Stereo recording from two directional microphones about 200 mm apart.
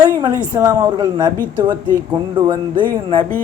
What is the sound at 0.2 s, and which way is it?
Speech, 15° right (ahead or behind).